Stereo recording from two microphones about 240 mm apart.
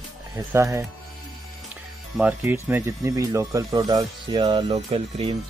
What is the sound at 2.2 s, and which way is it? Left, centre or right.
Speech, centre.